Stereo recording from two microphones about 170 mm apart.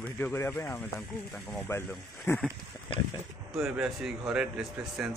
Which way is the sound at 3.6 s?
Centre (ahead or behind).